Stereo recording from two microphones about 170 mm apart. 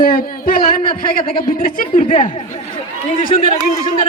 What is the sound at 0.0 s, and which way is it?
A woman's voice, 60° left (ahead or behind).